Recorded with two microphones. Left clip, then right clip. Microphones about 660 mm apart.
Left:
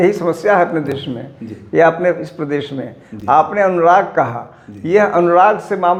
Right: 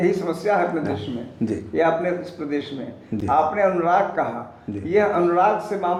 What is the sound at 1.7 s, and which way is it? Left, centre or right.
A man's voice, left.